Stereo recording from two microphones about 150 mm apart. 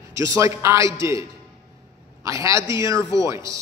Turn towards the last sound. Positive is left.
turn(degrees=-20)  # may be behind; listen again after turning